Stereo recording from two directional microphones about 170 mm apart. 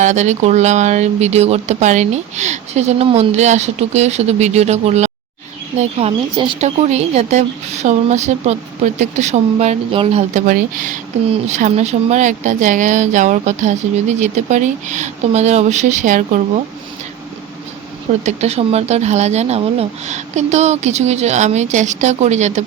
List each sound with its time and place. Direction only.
0.0 s a woman's voice: 45° right (ahead or behind)
18.2 s a woman's voice: 40° right (ahead or behind)